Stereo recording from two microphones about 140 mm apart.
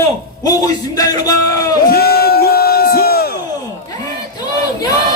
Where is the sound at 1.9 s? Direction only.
90° left.